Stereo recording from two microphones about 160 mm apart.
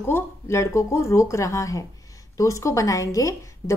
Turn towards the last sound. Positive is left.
turn(degrees=20)  # may be behind; listen again after turning